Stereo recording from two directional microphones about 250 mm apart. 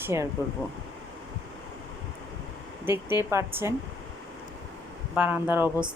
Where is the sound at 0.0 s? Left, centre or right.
Centre.